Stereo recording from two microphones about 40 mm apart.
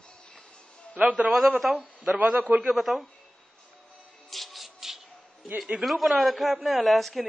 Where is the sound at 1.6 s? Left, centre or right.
Centre.